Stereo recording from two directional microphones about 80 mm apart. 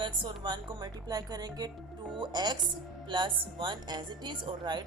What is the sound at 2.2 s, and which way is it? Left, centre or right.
A woman's voice, right.